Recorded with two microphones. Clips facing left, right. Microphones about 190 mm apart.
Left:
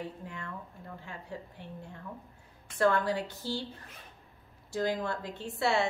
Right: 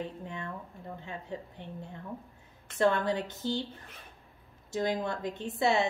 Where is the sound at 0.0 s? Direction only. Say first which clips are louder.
Right 3 dB; 20° right (ahead or behind).